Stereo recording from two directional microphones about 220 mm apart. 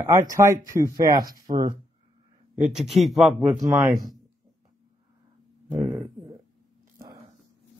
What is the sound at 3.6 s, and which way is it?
Speech, 15° right (ahead or behind).